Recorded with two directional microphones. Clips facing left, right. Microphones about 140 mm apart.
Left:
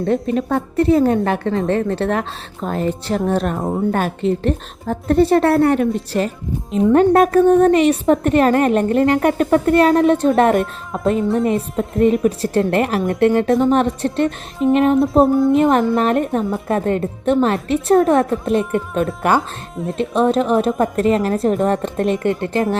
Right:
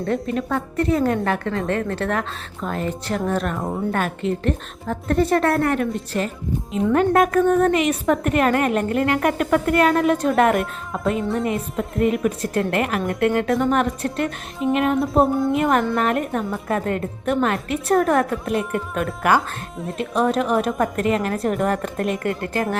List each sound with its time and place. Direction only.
0.0 s a woman's voice: 25° left (ahead or behind)
6.9 s a woman's voice: 35° left (ahead or behind)
11.9 s a woman's voice: 30° left (ahead or behind)
14.9 s speech: centre (ahead or behind)
15.5 s a woman's voice: 25° left (ahead or behind)
19.4 s speech: centre (ahead or behind)
20.0 s a woman's voice: 25° left (ahead or behind)